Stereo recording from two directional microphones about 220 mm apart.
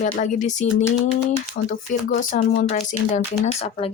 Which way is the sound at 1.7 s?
35° left (ahead or behind).